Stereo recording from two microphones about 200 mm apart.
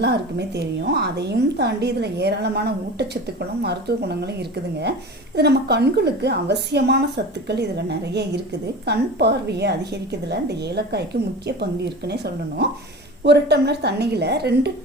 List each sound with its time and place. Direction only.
0.0 s a woman's voice: 55° right (ahead or behind)